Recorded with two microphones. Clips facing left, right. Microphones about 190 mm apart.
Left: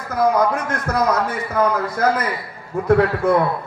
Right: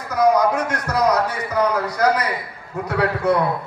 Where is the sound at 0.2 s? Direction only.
50° left (ahead or behind).